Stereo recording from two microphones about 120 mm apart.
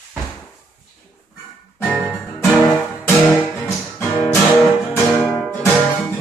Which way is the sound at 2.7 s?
15° left (ahead or behind).